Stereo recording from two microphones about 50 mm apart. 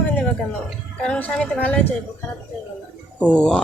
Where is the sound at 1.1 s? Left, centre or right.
Left.